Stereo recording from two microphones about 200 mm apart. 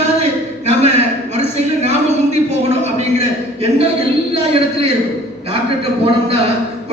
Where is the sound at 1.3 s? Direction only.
35° right (ahead or behind).